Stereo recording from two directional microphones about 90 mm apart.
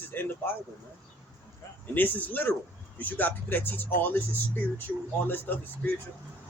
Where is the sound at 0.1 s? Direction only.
20° left (ahead or behind).